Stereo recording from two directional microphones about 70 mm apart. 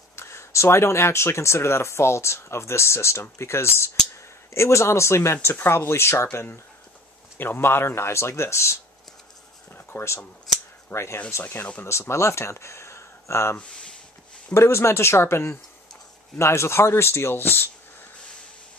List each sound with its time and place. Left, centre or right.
0.1 s speech: left
9.9 s speech: left
13.6 s speech: centre
14.5 s speech: left